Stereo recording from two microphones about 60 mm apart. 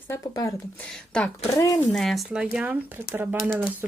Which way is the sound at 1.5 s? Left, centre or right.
Left.